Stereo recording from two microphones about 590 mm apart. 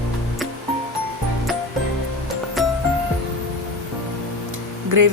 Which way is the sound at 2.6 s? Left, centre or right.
Centre.